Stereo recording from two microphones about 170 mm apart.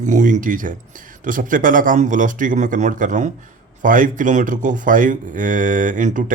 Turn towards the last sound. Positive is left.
turn(degrees=-50)  # may be behind; listen again after turning